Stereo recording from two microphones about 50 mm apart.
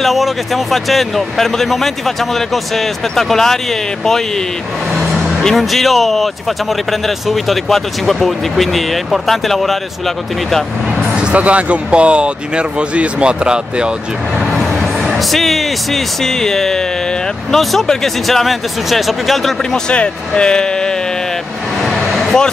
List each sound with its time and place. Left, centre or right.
0.0 s speech: centre
5.4 s speech: centre
11.3 s speech: right
14.4 s speech: centre
19.9 s speech: left
21.8 s a sound: centre